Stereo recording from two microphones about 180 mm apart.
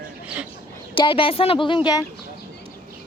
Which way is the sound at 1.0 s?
30° left (ahead or behind).